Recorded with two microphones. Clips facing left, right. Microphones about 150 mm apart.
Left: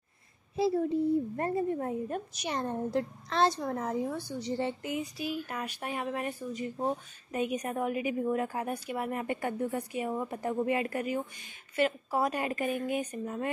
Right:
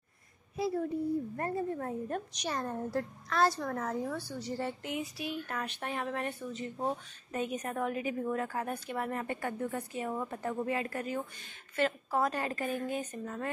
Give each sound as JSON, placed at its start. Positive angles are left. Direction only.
{"t": 0.6, "sound": "a woman's voice", "side_deg": 30}
{"t": 2.5, "sound": "a woman's voice", "side_deg": 25}
{"t": 4.8, "sound": "speech", "side_deg": 0}